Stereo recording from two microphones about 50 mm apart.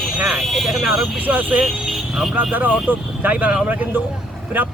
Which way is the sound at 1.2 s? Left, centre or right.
Right.